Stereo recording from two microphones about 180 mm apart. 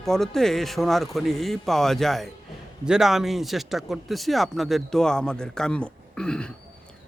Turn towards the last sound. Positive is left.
turn(degrees=5)  # may be behind; listen again after turning